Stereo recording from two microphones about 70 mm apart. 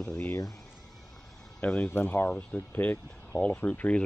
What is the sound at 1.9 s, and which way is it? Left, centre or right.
Speech, left.